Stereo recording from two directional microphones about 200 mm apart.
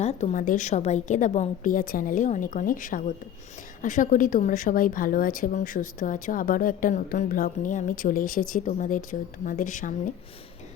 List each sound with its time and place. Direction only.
0.0 s a woman's voice: 35° left (ahead or behind)